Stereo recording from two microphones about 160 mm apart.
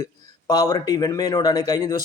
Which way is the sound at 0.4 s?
20° left (ahead or behind).